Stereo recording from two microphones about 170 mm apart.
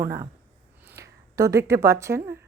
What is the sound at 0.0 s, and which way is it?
Speech, 20° right (ahead or behind).